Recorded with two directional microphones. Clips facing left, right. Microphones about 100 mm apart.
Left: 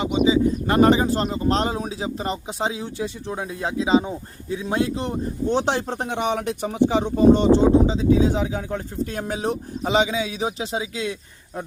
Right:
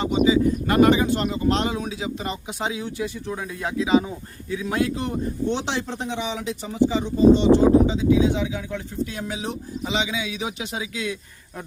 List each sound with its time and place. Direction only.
0.3 s speech: 30° left (ahead or behind)
5.5 s speech: 45° left (ahead or behind)
7.5 s speech: 35° left (ahead or behind)